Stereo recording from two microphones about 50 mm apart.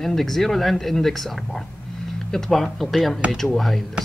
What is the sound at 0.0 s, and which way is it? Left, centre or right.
Speech, centre.